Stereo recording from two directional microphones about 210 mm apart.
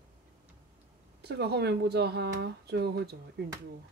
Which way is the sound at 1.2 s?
50° right (ahead or behind).